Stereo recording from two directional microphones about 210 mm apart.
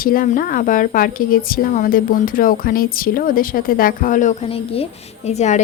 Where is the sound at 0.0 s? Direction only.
40° left (ahead or behind).